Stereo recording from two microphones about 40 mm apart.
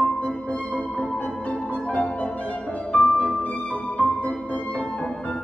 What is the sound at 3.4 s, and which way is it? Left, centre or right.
Music, left.